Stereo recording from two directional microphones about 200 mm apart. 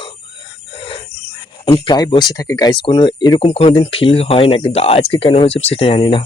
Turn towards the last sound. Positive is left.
turn(degrees=25)  # may be behind; listen again after turning